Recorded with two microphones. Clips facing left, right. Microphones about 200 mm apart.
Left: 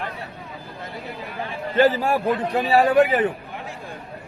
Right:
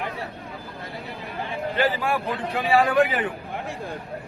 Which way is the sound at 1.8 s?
40° left (ahead or behind).